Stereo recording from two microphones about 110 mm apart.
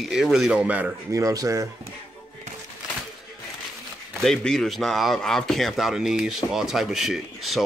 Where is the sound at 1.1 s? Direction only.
30° right (ahead or behind).